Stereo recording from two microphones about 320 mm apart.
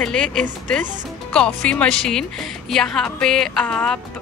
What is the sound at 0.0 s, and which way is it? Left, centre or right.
Speech, centre.